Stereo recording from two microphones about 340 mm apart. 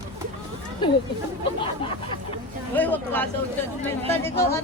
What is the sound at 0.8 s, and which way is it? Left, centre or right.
Speech, centre.